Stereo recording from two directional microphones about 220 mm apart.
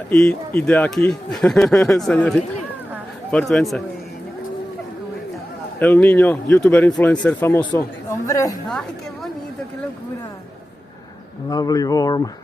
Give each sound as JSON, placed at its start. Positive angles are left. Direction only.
{"t": 0.1, "sound": "speech", "side_deg": 5}
{"t": 5.8, "sound": "speech", "side_deg": 5}
{"t": 11.4, "sound": "speech", "side_deg": 15}